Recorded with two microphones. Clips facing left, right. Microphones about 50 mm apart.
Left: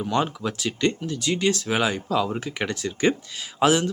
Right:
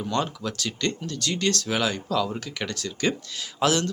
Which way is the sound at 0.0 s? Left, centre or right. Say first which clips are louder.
Left 3 dB; centre.